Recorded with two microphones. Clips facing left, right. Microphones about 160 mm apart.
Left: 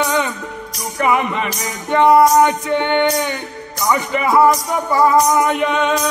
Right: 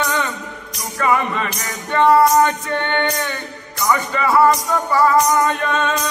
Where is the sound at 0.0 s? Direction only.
15° left (ahead or behind).